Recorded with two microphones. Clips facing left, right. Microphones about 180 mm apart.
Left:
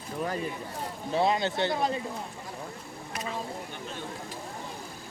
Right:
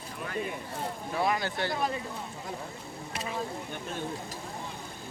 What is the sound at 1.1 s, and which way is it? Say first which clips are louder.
Speech: left 4 dB; 25° left (ahead or behind).